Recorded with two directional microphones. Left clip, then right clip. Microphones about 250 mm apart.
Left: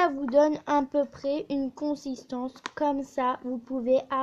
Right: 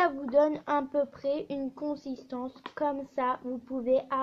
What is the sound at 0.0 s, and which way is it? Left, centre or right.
Speech, left.